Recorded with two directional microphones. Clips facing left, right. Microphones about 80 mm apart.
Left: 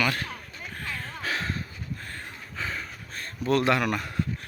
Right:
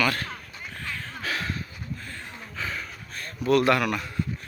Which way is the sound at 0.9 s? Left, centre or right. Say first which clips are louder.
Even; left.